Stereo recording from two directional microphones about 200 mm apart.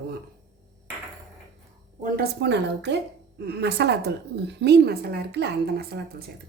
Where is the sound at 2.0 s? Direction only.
55° right (ahead or behind).